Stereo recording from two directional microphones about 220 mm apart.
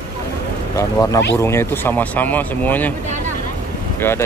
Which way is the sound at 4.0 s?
10° left (ahead or behind).